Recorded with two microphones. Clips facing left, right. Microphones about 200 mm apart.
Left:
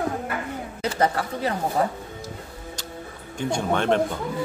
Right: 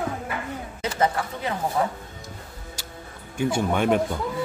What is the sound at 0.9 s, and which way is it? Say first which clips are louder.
A woman's voice: even; 35° left (ahead or behind).